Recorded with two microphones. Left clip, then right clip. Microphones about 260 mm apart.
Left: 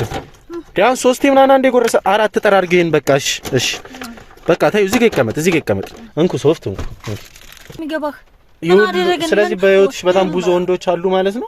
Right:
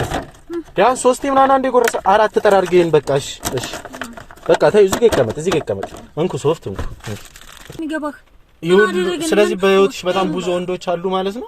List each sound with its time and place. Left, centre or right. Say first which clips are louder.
0.8 s speech: left 1 dB; left
4.4 s speech: right 2 dB; left
6.1 s speech: left 4 dB; left
7.9 s speech: left 3 dB; left